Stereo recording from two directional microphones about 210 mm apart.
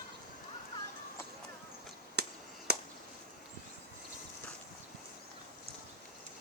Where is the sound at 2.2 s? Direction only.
50° right (ahead or behind).